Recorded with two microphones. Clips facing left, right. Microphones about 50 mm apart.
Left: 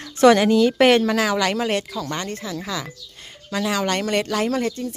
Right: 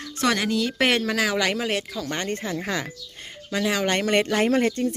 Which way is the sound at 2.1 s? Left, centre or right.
Right.